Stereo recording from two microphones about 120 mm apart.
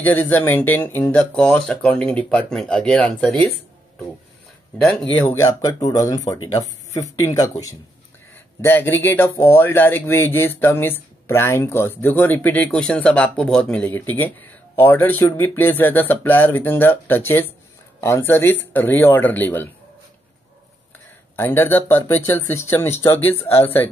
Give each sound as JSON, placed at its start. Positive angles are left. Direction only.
{"t": 0.0, "sound": "speech", "side_deg": 15}
{"t": 5.1, "sound": "speech", "side_deg": 20}
{"t": 8.5, "sound": "speech", "side_deg": 20}
{"t": 21.4, "sound": "speech", "side_deg": 15}